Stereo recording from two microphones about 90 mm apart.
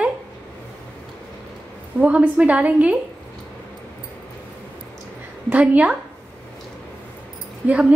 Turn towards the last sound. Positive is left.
turn(degrees=-15)  # may be behind; listen again after turning